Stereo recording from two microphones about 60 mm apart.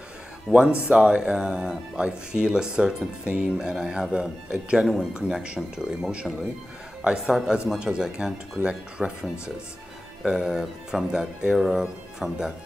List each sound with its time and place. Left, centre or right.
0.5 s speech: centre
10.2 s speech: centre